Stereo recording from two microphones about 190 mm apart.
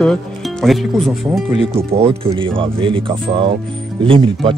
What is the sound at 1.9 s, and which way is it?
Speech, 30° right (ahead or behind).